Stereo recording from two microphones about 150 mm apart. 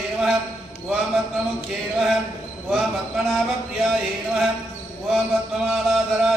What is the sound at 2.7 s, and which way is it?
Mantra, 5° right (ahead or behind).